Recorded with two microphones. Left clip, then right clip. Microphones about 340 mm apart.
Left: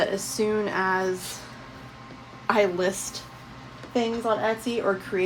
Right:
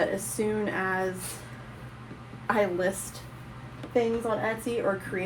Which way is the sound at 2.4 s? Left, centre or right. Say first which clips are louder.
Left 3 dB; left.